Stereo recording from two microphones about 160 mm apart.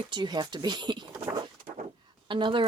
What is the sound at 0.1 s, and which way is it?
Speech, 25° right (ahead or behind).